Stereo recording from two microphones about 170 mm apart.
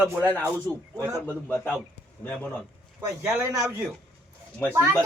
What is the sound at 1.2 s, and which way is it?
Speech, 10° left (ahead or behind).